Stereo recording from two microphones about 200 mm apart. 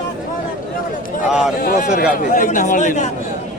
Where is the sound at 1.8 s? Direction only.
35° left (ahead or behind).